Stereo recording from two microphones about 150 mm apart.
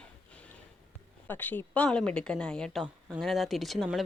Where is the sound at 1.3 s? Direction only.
10° left (ahead or behind).